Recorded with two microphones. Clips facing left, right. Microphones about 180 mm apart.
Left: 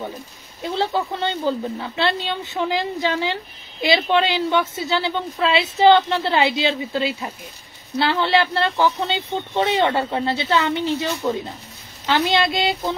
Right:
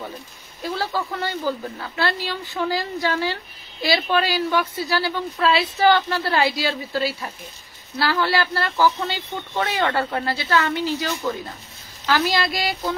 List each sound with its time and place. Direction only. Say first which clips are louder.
0.6 s speech: left 3 dB; 25° left (ahead or behind)